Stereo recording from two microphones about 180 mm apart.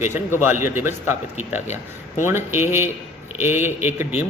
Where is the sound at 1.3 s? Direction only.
40° left (ahead or behind).